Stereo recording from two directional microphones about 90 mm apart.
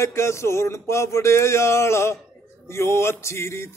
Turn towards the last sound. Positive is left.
turn(degrees=30)  # may be behind; listen again after turning